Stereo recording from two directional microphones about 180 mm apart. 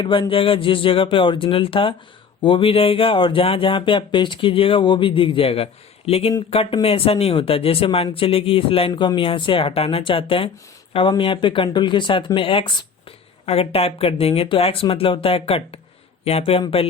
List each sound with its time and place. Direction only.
0.0 s speech: 30° left (ahead or behind)